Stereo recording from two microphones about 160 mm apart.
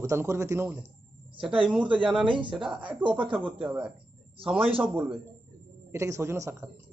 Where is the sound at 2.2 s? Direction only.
30° right (ahead or behind).